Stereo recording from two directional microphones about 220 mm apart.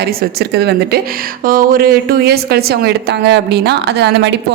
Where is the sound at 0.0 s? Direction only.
45° right (ahead or behind).